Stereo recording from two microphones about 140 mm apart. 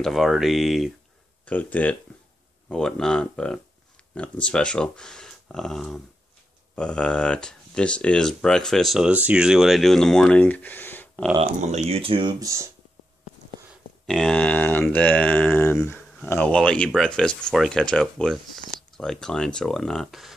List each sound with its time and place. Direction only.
0.0 s speech: centre (ahead or behind)
1.4 s speech: 10° left (ahead or behind)
11.3 s speech: 50° right (ahead or behind); by 12.6 s 25° right (ahead or behind)
14.0 s speech: 5° left (ahead or behind)